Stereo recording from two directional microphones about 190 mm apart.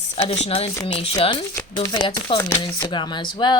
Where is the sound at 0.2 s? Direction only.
35° left (ahead or behind).